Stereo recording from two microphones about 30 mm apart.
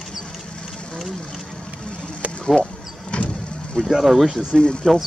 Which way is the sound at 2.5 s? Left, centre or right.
Left.